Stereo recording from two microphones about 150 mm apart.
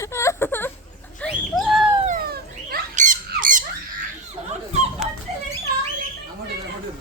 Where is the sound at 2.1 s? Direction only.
85° right.